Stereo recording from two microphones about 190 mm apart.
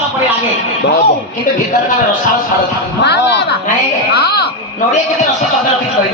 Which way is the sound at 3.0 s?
60° left (ahead or behind).